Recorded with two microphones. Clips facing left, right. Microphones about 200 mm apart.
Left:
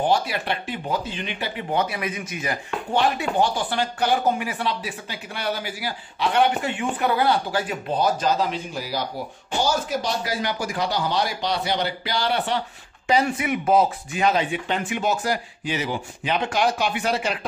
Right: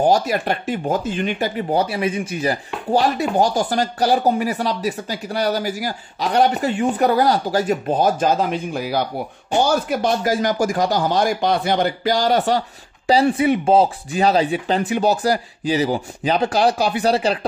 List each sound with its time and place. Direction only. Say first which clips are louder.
0.0 s speech: right 5 dB; 45° right (ahead or behind)